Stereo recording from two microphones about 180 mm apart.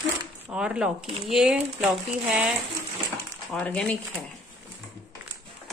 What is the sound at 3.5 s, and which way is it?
Speech, 5° left (ahead or behind).